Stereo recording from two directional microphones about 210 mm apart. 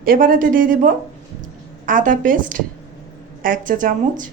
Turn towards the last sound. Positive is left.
turn(degrees=-40)  # may be behind; listen again after turning